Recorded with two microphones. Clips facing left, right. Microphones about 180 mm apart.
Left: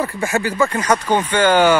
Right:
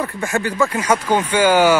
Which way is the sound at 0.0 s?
5° left (ahead or behind).